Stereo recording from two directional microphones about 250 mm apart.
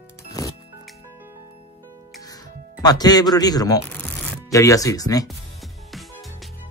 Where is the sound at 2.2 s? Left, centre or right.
Centre.